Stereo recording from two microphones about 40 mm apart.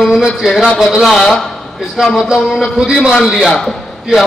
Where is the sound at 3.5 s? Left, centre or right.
Centre.